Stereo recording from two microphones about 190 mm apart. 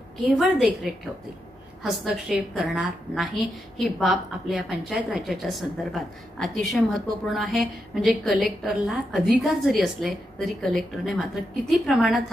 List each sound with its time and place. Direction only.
0.4 s a woman's voice: centre (ahead or behind)